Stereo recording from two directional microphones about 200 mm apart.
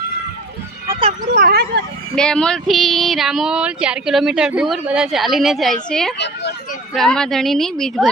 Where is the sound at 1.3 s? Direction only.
50° right (ahead or behind).